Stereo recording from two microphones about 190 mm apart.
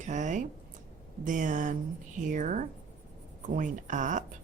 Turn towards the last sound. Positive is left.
turn(degrees=-40)  # may be behind; listen again after turning